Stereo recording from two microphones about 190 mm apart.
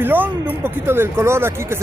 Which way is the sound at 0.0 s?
10° right (ahead or behind).